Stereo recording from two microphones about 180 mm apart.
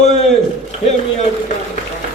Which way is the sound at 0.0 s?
40° left (ahead or behind).